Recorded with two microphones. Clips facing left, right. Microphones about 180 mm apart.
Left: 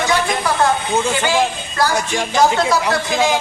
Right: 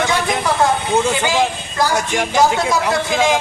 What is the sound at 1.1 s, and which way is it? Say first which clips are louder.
A man's voice: even; 15° right (ahead or behind).